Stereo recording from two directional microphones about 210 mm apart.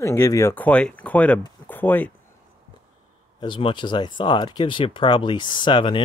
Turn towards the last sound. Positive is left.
turn(degrees=25)  # may be behind; listen again after turning